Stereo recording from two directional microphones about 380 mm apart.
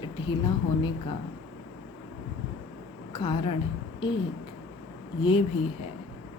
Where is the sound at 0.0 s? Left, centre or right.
Centre.